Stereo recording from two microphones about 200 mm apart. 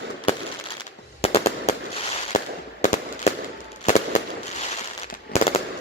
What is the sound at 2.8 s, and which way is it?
Fireworks, 35° left (ahead or behind).